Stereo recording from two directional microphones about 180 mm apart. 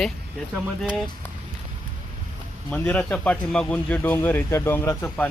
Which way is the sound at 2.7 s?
10° left (ahead or behind).